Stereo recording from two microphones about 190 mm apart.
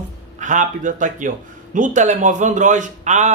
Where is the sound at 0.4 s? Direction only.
40° right (ahead or behind).